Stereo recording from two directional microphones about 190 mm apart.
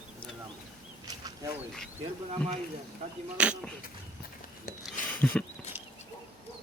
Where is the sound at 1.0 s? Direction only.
20° right (ahead or behind).